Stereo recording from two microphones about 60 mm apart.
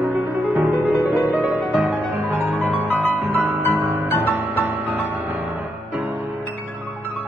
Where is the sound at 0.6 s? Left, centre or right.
Right.